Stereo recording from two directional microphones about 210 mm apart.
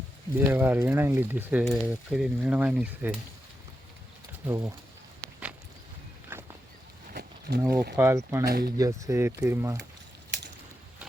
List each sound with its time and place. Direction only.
0.3 s speech: 10° right (ahead or behind)
4.4 s speech: 10° right (ahead or behind)
6.3 s a sound: 10° right (ahead or behind)
7.1 s a sound: 50° right (ahead or behind)
7.7 s speech: 50° right (ahead or behind)
7.9 s speech: 10° right (ahead or behind)
8.4 s speech: 50° right (ahead or behind)
8.8 s speech: 15° right (ahead or behind)